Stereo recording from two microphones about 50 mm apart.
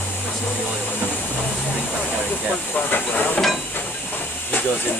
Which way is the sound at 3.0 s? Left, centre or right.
Left.